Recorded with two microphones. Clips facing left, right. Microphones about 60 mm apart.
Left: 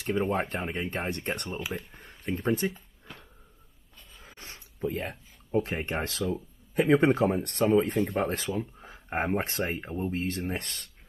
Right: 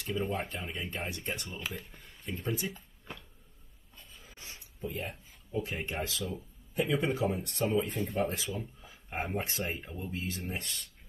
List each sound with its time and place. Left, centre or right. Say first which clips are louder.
0.3 s speech: left 6 dB; left
4.7 s speech: left 6 dB; left